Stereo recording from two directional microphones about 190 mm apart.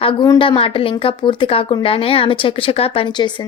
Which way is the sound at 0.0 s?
25° left (ahead or behind).